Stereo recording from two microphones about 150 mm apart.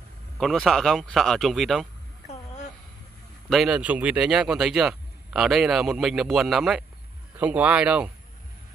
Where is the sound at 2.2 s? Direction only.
50° left (ahead or behind).